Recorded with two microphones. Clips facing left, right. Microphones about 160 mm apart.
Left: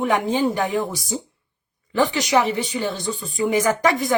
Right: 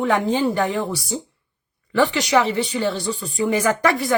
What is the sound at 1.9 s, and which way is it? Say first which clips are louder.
Speech: right 1 dB; 20° left (ahead or behind).